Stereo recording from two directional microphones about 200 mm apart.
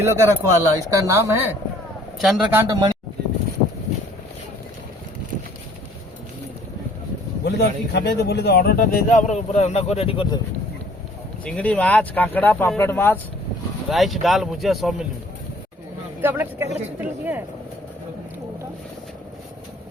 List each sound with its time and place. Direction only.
0.0 s speech: 15° right (ahead or behind)
2.1 s speech: centre (ahead or behind)
7.4 s speech: 55° left (ahead or behind); by 10.3 s 25° left (ahead or behind)
11.4 s speech: 5° left (ahead or behind)
13.9 s speech: centre (ahead or behind)
16.2 s speech: 10° right (ahead or behind)